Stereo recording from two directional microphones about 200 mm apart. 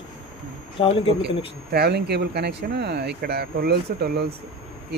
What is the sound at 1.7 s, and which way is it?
Speech, 55° right (ahead or behind).